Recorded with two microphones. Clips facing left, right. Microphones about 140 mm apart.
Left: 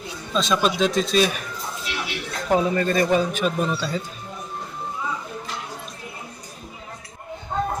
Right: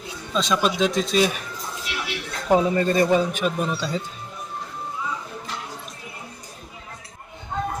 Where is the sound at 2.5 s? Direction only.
20° right (ahead or behind).